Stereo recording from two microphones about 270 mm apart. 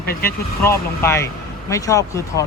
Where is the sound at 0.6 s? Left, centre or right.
Centre.